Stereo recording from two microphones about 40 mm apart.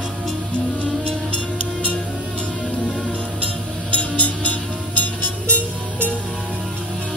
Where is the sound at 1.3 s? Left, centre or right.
Left.